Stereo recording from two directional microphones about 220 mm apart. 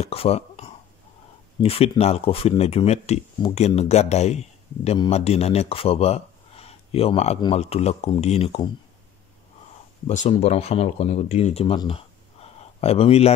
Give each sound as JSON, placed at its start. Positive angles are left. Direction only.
{"t": 0.0, "sound": "speech", "side_deg": 25}
{"t": 10.0, "sound": "speech", "side_deg": 25}